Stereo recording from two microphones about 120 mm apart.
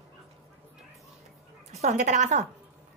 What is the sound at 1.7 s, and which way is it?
Speech, 75° right (ahead or behind).